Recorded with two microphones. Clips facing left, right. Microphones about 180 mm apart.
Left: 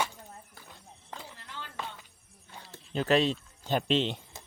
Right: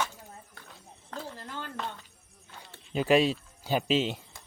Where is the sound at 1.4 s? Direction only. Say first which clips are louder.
Right 6 dB; 45° right (ahead or behind).